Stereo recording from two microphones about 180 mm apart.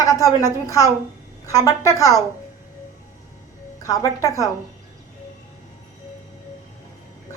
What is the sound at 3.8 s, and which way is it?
Speech, 20° left (ahead or behind).